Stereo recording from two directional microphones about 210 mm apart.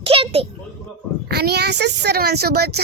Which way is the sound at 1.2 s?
50° right (ahead or behind).